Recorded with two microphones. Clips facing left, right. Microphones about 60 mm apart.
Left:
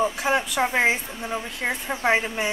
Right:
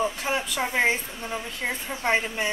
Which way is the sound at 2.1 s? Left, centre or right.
Centre.